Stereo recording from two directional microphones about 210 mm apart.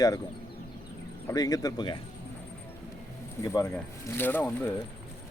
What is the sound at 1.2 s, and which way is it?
Speech, 15° left (ahead or behind).